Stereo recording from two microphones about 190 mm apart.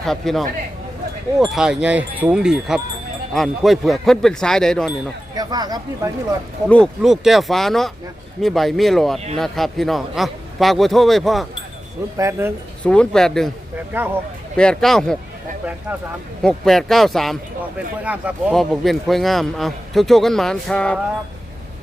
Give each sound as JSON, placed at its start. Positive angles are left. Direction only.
{"t": 0.0, "sound": "a man's voice", "side_deg": 0}
{"t": 5.3, "sound": "speech", "side_deg": -20}
{"t": 6.7, "sound": "a man's voice", "side_deg": 5}
{"t": 12.1, "sound": "speech", "side_deg": -15}
{"t": 12.8, "sound": "a man's voice", "side_deg": 5}
{"t": 13.9, "sound": "speech", "side_deg": -10}
{"t": 14.5, "sound": "a man's voice", "side_deg": 5}